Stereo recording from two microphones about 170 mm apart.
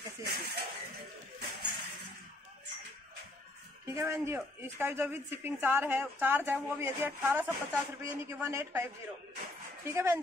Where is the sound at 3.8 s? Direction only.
15° right (ahead or behind).